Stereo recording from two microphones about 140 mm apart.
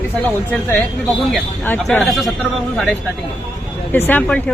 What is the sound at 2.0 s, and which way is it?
A man's voice, centre (ahead or behind).